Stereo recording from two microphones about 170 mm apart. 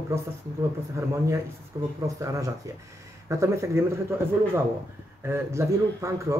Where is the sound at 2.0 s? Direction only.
20° right (ahead or behind).